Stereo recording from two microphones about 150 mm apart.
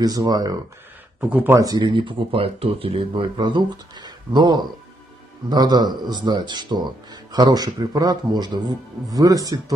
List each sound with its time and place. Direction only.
0.0 s speech: 25° right (ahead or behind)
1.3 s speech: 10° right (ahead or behind)
1.6 s speech: 25° right (ahead or behind)